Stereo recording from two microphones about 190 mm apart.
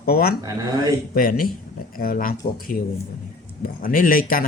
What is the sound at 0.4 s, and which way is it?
Speech, 20° right (ahead or behind).